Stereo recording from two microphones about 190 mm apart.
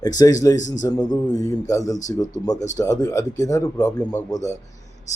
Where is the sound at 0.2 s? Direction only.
15° left (ahead or behind).